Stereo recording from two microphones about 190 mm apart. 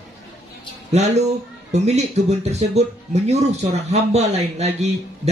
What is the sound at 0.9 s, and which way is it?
Speech, 35° right (ahead or behind).